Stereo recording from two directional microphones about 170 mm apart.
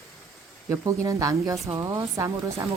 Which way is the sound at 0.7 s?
15° right (ahead or behind).